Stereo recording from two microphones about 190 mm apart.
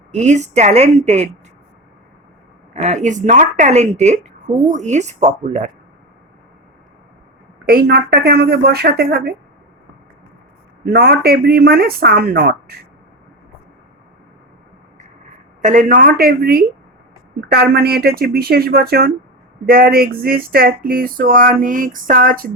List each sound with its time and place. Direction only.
0.1 s a woman's voice: 40° right (ahead or behind)
2.7 s a woman's voice: 40° right (ahead or behind)
7.6 s a woman's voice: 50° right (ahead or behind)
10.8 s a woman's voice: 55° right (ahead or behind)
15.6 s a woman's voice: 45° right (ahead or behind)